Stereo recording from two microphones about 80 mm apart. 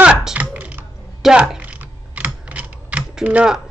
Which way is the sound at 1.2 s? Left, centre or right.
Centre.